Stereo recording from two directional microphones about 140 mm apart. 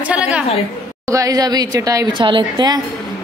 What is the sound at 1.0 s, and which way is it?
A woman's voice, 25° right (ahead or behind).